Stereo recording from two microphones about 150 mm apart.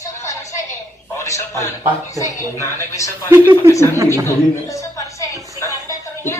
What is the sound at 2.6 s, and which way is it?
Speech, 20° left (ahead or behind).